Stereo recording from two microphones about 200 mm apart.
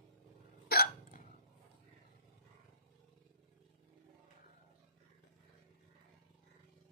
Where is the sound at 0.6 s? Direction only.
50° left (ahead or behind).